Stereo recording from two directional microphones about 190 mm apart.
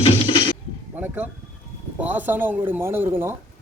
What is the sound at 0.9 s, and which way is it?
Speech, 10° right (ahead or behind).